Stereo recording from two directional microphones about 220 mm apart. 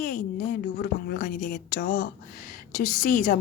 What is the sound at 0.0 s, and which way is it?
Speech, 40° left (ahead or behind).